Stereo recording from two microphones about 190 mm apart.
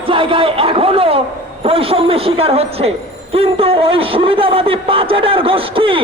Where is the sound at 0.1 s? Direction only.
25° right (ahead or behind).